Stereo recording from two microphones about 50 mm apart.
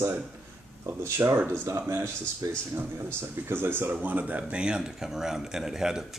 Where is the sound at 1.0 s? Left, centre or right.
Right.